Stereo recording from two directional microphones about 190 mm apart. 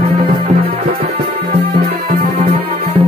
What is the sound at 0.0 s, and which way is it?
Music, 30° right (ahead or behind).